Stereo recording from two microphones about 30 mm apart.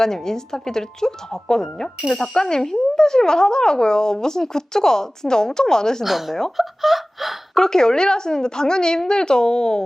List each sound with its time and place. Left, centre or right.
0.0 s speech: centre
6.1 s speech: centre
7.6 s speech: centre